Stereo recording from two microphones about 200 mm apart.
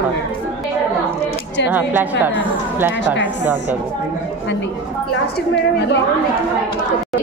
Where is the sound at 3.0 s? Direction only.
65° left (ahead or behind).